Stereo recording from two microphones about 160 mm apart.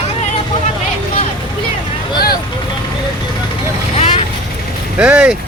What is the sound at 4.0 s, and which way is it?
Vehicle, 35° left (ahead or behind).